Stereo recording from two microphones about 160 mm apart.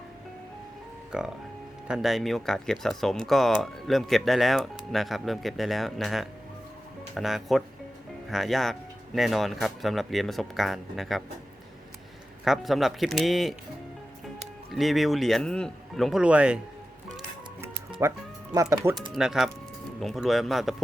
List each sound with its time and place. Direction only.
1.1 s speech: 5° right (ahead or behind)
12.5 s speech: centre (ahead or behind)
14.7 s speech: centre (ahead or behind)
18.0 s speech: 15° right (ahead or behind)
19.1 s speech: centre (ahead or behind)